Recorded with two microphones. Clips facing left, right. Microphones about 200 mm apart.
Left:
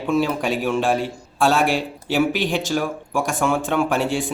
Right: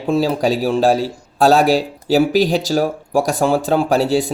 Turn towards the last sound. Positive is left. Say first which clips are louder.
# right 5 dB
turn(degrees=-35)  # may be behind; listen again after turning